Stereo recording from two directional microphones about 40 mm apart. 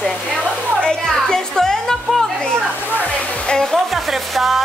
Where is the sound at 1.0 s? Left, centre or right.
Centre.